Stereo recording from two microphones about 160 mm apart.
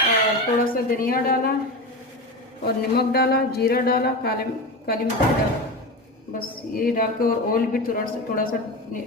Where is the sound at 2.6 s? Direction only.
80° left.